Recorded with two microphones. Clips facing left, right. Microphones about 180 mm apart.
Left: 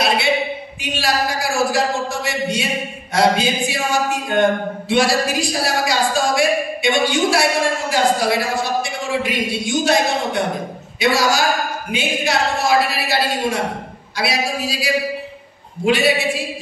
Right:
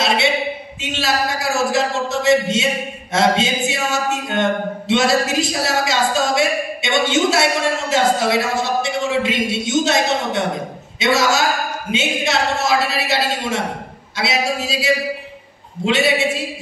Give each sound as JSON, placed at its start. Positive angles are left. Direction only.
{"t": 0.7, "sound": "speech", "side_deg": -25}